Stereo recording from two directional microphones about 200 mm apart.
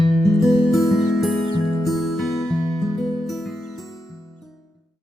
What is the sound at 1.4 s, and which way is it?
Music, 25° left (ahead or behind).